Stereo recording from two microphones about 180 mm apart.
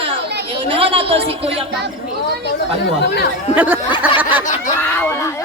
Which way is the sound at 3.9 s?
25° left (ahead or behind).